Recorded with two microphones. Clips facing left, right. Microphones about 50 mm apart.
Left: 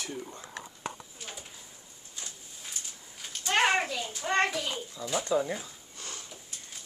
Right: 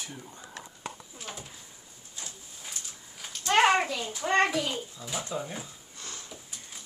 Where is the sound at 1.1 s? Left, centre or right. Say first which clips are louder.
Right 2 dB; centre.